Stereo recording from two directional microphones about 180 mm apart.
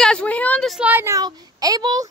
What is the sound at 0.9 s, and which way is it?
A child's voice, 15° right (ahead or behind).